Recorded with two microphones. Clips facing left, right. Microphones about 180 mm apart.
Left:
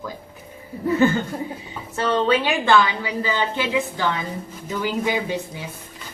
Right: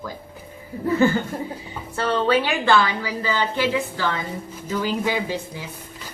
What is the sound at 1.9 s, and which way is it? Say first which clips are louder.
A woman's voice: even; 20° left (ahead or behind).